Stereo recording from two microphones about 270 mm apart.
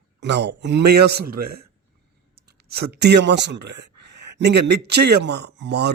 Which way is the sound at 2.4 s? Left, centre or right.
Right.